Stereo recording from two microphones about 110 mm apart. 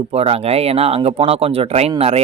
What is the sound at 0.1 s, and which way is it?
Speech, 65° right (ahead or behind).